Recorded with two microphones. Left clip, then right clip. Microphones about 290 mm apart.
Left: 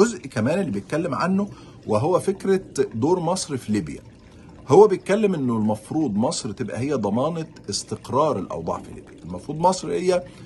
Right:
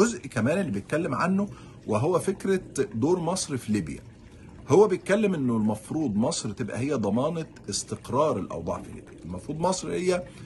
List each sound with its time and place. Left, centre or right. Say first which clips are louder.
0.0 s a man's voice: left 4 dB; centre